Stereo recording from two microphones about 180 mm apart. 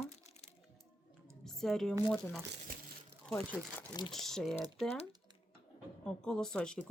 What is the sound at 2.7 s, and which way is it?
Crumpling, 50° right (ahead or behind).